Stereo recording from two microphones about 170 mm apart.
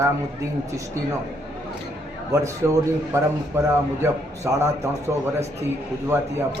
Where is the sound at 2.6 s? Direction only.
15° right (ahead or behind).